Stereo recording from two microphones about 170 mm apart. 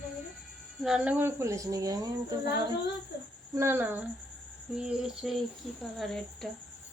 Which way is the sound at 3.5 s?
15° right (ahead or behind).